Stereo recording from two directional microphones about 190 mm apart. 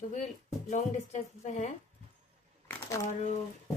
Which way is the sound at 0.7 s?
40° left (ahead or behind).